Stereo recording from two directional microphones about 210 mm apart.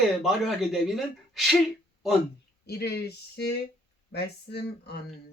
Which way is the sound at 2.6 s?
50° left (ahead or behind).